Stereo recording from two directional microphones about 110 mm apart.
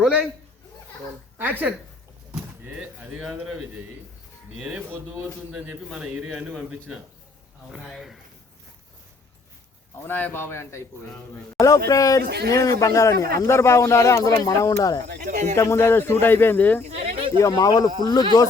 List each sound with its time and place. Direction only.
0.0 s a man's voice: 10° right (ahead or behind)
1.4 s a man's voice: 15° right (ahead or behind)
2.3 s speech: 5° right (ahead or behind)
5.5 s a man's voice: 5° right (ahead or behind)
10.1 s speech: 15° left (ahead or behind)
15.3 s speech: 90° right
15.5 s speech: 25° left (ahead or behind)
16.9 s a sound: 70° right (ahead or behind)
17.4 s speech: 35° left (ahead or behind)